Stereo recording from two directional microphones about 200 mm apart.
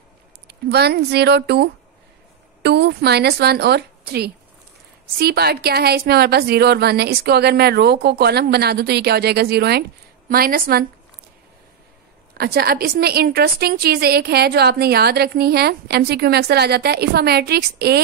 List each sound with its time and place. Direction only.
0.5 s a woman's voice: 55° right (ahead or behind)
12.4 s a woman's voice: 50° right (ahead or behind)